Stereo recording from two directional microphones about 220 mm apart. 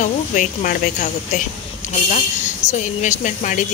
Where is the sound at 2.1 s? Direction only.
35° left (ahead or behind).